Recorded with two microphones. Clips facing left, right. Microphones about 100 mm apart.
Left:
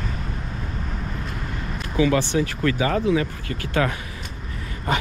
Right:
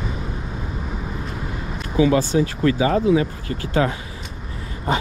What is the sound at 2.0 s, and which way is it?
Speech, 30° right (ahead or behind).